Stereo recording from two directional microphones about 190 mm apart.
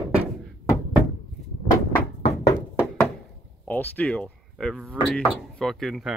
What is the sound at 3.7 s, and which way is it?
Speech, 10° left (ahead or behind).